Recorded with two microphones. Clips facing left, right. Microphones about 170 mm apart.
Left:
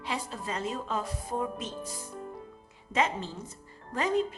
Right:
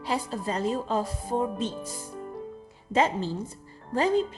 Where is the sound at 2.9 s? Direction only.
35° right (ahead or behind).